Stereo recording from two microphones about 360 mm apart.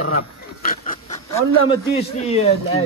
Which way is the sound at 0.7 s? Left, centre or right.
Left.